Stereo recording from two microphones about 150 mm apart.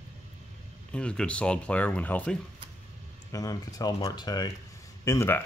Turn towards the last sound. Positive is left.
turn(degrees=20)  # may be behind; listen again after turning